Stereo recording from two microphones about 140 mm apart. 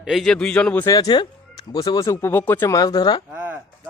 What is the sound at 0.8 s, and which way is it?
Speech, 25° left (ahead or behind).